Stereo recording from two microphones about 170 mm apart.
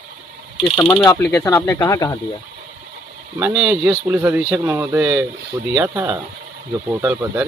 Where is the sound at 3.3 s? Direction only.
5° right (ahead or behind).